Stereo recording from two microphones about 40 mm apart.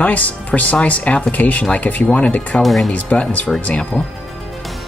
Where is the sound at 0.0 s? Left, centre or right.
Left.